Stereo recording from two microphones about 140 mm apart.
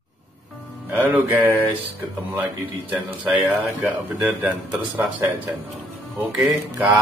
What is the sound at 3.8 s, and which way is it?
A man's voice, 10° right (ahead or behind).